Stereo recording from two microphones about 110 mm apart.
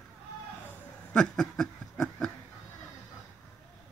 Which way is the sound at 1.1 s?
10° left (ahead or behind).